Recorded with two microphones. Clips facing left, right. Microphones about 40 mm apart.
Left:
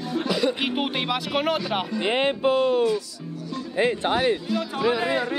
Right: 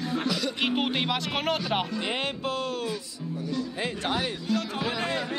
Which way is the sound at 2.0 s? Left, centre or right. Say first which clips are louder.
Left 7 dB; left.